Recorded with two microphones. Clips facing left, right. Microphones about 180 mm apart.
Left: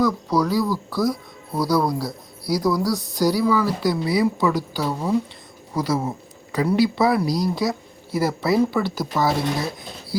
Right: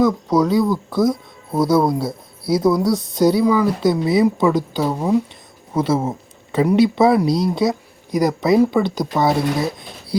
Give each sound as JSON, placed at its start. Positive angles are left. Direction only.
{"t": 0.0, "sound": "speech", "side_deg": -20}